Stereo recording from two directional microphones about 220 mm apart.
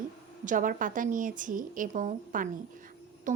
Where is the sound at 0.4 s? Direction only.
35° right (ahead or behind).